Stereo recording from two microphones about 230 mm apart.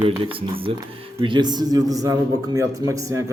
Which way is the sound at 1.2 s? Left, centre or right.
Centre.